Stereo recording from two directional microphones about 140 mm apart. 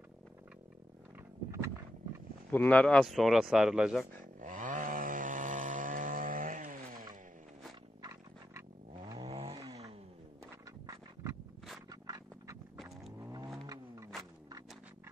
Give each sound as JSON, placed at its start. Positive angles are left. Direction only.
{"t": 2.5, "sound": "speech", "side_deg": 10}
{"t": 4.4, "sound": "chainsaw", "side_deg": -65}
{"t": 8.0, "sound": "a sound", "side_deg": -20}
{"t": 8.9, "sound": "vehicle", "side_deg": -30}
{"t": 9.3, "sound": "vehicle", "side_deg": -45}
{"t": 10.4, "sound": "a sound", "side_deg": -20}
{"t": 11.9, "sound": "scrape", "side_deg": -25}
{"t": 13.2, "sound": "vehicle", "side_deg": -25}